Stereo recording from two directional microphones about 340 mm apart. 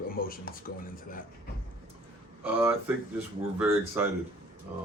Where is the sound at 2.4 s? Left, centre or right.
Centre.